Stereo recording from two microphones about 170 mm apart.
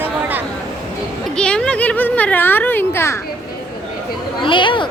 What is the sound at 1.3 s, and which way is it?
Speech, 5° left (ahead or behind).